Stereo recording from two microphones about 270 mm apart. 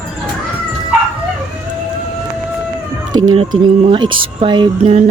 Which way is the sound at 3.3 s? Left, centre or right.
Centre.